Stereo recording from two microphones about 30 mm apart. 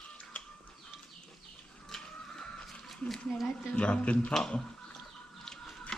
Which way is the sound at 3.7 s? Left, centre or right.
Left.